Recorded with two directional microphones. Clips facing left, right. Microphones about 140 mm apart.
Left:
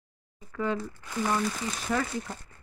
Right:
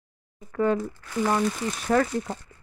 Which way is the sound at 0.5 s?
50° right (ahead or behind).